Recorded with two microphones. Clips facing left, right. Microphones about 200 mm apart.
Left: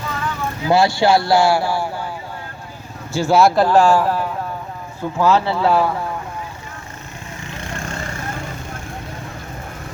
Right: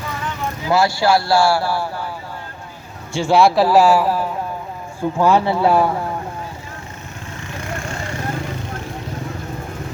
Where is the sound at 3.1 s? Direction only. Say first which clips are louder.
Even; centre (ahead or behind); by 5.9 s 15° right (ahead or behind).